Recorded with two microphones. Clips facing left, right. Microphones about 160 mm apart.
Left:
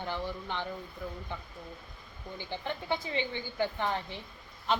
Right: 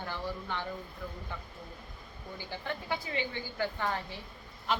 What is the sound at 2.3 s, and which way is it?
A woman's voice, 20° left (ahead or behind).